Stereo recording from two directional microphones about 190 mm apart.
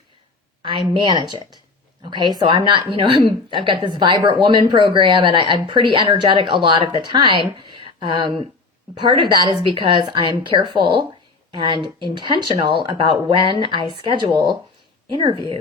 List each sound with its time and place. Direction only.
0.6 s speech: 25° right (ahead or behind)